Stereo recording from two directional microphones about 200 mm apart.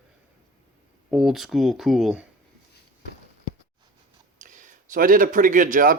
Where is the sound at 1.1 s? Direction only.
Centre (ahead or behind).